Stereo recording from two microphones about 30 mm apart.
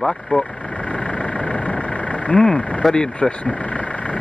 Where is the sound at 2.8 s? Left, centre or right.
Centre.